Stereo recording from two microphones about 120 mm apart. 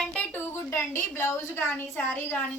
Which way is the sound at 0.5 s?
20° left (ahead or behind).